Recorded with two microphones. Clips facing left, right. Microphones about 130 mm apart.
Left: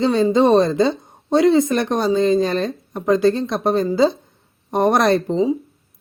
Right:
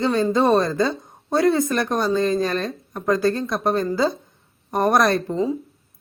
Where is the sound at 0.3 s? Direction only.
20° left (ahead or behind).